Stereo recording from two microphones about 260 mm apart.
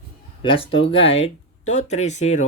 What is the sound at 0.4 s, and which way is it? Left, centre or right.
Speech, left.